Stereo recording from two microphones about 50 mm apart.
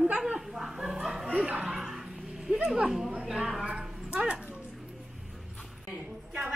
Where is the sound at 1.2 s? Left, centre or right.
Right.